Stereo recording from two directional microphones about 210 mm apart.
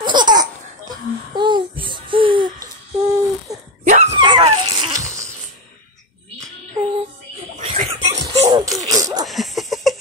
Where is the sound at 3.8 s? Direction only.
35° right (ahead or behind).